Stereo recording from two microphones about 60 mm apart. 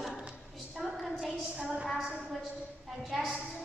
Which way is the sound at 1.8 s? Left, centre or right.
Centre.